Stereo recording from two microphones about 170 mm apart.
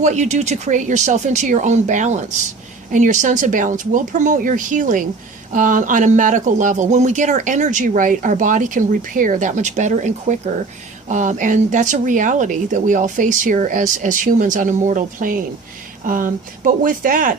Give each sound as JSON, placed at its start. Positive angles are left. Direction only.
{"t": 0.0, "sound": "speech", "side_deg": -45}